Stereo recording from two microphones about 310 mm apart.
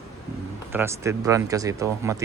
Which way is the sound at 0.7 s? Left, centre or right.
Centre.